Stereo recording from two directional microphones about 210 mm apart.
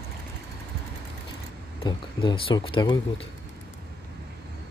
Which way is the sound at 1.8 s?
25° left (ahead or behind).